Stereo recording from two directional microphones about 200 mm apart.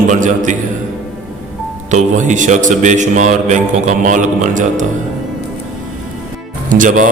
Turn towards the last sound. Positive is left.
turn(degrees=-40)  # may be behind; listen again after turning